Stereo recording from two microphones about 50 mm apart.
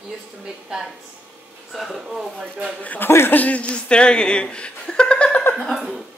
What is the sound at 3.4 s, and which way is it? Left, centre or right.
Speech, left.